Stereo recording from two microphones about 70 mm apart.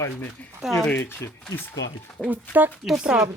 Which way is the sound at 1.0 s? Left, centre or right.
Left.